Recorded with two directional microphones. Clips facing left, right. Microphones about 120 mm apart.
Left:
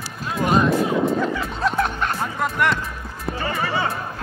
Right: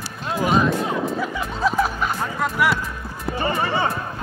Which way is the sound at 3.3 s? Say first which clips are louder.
Right 2 dB; 20° right (ahead or behind).